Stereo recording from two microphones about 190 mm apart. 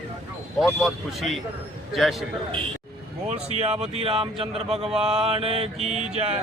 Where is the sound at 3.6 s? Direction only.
35° right (ahead or behind).